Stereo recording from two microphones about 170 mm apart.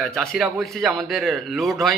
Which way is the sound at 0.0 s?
Centre (ahead or behind).